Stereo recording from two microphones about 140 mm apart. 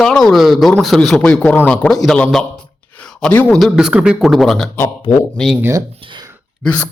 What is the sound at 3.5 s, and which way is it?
Speech, centre (ahead or behind).